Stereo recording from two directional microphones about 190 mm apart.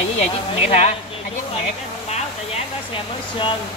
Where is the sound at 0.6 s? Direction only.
35° left (ahead or behind).